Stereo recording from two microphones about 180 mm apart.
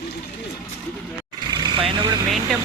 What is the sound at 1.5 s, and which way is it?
Vehicle, 25° right (ahead or behind).